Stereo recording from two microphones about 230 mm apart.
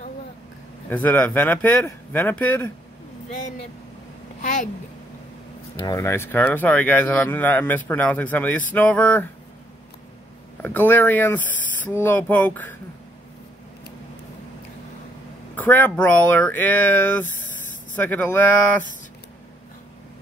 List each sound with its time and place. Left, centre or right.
0.8 s a man's voice: centre
4.4 s a child's voice: left
5.9 s a man's voice: centre
10.6 s a man's voice: centre
15.5 s a man's voice: centre